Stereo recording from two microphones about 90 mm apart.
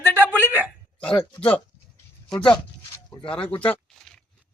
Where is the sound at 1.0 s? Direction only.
10° left (ahead or behind).